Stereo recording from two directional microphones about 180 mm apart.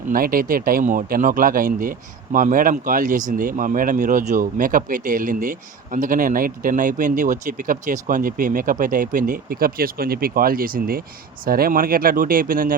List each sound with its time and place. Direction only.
0.1 s speech: 55° right (ahead or behind)